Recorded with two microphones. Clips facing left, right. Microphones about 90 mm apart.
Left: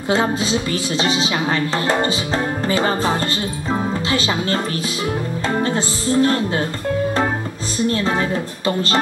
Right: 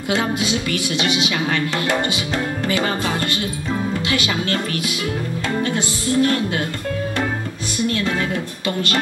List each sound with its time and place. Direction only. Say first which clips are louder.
0.1 s speech: left 2 dB; 30° left (ahead or behind)
5.6 s speech: left 2 dB; 35° left (ahead or behind)
7.8 s speech: left 2 dB; 30° left (ahead or behind)